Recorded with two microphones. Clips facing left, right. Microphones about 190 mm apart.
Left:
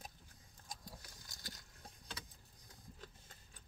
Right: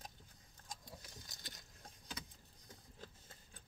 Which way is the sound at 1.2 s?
20° right (ahead or behind).